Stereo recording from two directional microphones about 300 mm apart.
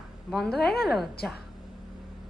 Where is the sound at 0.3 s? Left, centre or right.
Centre.